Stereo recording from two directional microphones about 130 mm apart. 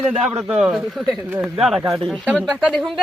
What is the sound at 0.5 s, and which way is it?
A woman's voice, 5° right (ahead or behind).